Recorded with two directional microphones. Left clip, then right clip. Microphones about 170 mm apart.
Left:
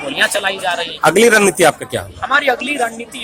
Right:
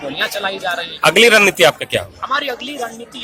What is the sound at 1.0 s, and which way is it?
Speech, 10° left (ahead or behind).